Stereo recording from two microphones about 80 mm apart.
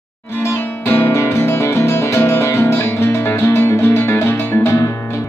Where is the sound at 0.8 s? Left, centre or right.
Left.